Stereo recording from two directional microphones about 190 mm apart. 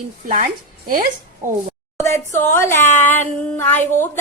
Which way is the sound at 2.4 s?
15° left (ahead or behind).